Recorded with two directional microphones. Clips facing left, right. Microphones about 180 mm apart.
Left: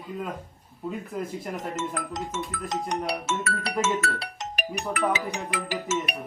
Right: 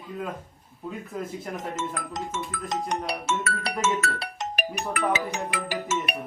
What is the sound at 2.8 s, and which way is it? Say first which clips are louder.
Speech: left 1 dB; 50° right (ahead or behind).